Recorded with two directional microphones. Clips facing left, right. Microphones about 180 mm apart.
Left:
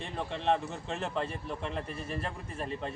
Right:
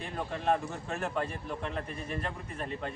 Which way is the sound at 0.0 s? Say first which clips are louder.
Even; 5° right (ahead or behind).